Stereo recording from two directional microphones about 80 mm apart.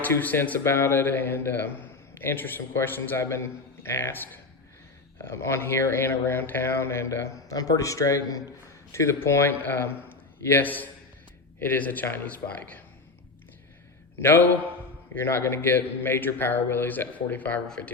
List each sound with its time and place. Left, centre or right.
0.0 s a man's voice: left
0.6 s a man's voice: left
14.2 s a man's voice: left